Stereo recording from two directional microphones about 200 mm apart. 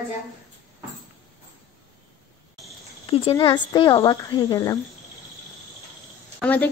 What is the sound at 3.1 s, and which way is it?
Speech, 30° left (ahead or behind).